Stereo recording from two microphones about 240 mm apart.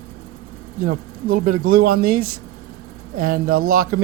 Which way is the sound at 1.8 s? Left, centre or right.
Right.